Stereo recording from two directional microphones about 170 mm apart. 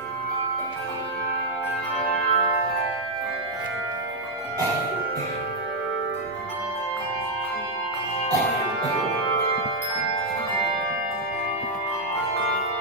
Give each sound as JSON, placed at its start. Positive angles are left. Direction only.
{"t": 2.0, "sound": "music", "side_deg": 35}